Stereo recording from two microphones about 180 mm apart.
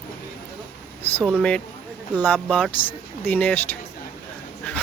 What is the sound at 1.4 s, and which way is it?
Speech, 5° left (ahead or behind).